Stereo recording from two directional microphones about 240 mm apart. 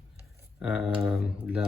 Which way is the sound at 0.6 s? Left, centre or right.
Centre.